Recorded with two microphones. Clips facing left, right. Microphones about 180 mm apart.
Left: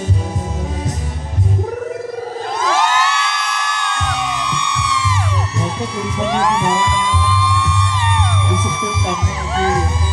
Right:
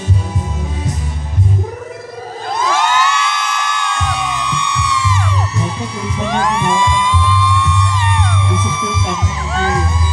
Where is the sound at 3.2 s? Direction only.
35° left (ahead or behind).